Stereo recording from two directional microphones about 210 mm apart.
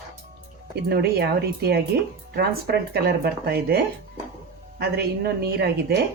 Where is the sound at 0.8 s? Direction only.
50° right (ahead or behind).